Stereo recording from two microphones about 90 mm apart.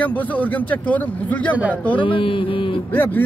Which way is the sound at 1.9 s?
75° left (ahead or behind).